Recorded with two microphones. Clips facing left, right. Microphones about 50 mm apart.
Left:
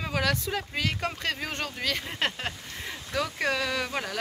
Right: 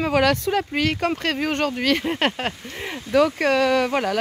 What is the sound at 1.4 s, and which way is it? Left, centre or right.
Speech, right.